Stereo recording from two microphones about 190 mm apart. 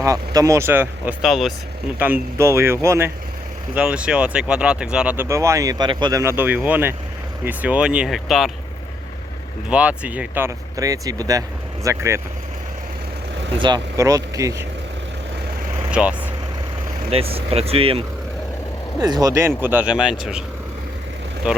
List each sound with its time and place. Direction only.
0.0 s speech: 15° right (ahead or behind)
1.2 s speech: centre (ahead or behind)
9.6 s speech: 5° right (ahead or behind)
13.6 s speech: 25° right (ahead or behind)
15.9 s speech: 5° right (ahead or behind)
17.1 s speech: 30° right (ahead or behind); by 20.4 s 5° right (ahead or behind)
21.5 s speech: 5° right (ahead or behind)